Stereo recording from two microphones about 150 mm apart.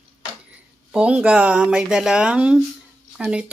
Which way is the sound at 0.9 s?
5° right (ahead or behind).